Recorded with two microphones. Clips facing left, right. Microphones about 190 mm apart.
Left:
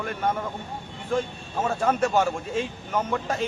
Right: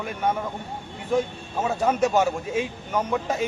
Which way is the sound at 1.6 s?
5° right (ahead or behind).